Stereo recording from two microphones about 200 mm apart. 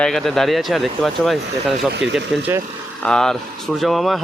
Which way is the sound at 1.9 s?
65° right (ahead or behind).